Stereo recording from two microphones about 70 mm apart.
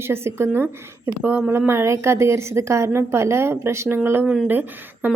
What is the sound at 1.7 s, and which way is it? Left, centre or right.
A woman's voice, right.